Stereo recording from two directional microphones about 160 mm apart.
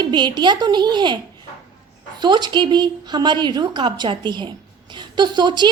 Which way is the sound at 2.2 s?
25° right (ahead or behind).